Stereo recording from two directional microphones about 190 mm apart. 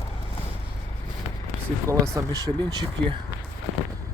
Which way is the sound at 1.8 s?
15° right (ahead or behind).